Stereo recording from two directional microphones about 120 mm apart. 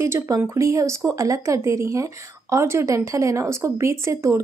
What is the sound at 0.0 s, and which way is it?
Speech, 25° right (ahead or behind).